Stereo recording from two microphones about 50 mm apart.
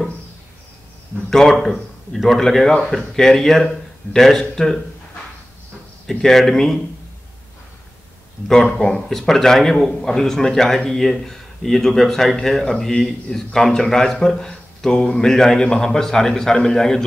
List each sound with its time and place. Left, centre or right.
1.3 s speech: centre
6.0 s speech: centre
8.7 s speech: centre
9.1 s speech: centre